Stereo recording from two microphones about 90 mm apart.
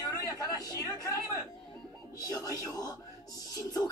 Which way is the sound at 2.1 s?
45° left (ahead or behind).